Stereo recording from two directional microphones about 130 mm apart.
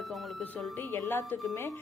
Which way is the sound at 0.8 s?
20° left (ahead or behind).